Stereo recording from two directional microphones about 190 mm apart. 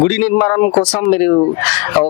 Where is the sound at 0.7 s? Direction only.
25° left (ahead or behind).